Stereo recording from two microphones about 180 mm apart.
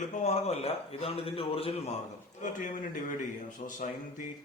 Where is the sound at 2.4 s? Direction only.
45° left (ahead or behind).